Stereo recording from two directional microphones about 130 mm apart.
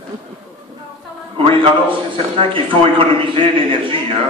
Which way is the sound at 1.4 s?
40° right (ahead or behind).